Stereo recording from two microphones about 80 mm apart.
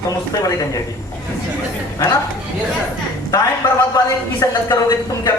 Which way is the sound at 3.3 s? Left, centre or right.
Left.